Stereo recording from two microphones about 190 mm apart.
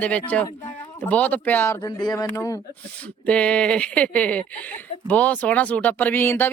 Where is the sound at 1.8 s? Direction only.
20° left (ahead or behind).